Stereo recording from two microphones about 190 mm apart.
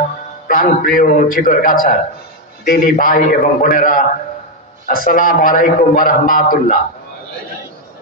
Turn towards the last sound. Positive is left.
turn(degrees=45)  # may be behind; listen again after turning